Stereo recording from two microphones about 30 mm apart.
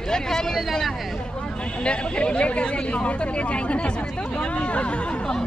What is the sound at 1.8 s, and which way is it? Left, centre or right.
Speech, left.